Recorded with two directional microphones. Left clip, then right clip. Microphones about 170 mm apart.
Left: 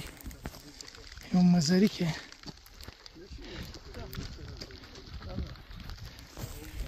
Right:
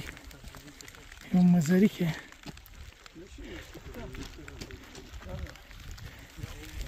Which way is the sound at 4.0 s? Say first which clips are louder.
Right 1 dB; 60° right (ahead or behind).